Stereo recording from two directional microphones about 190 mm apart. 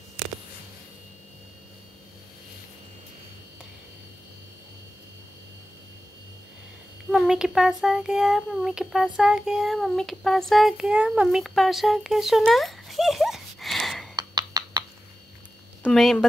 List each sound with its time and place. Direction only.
7.1 s a child's voice: 5° right (ahead or behind)
14.1 s a sound: 20° right (ahead or behind)
15.8 s speech: centre (ahead or behind)